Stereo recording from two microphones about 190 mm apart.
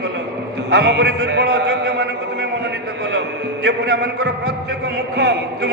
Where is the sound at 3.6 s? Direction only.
60° right (ahead or behind).